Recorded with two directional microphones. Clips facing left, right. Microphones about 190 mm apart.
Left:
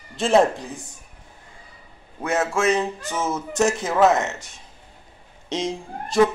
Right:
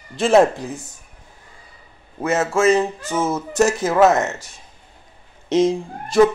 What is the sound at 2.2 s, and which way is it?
Speech, 5° right (ahead or behind).